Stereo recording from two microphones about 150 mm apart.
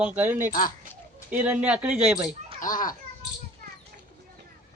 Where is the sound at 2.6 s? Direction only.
65° left (ahead or behind).